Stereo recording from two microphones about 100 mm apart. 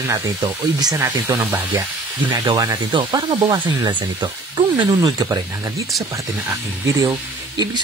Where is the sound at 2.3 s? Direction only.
40° right (ahead or behind).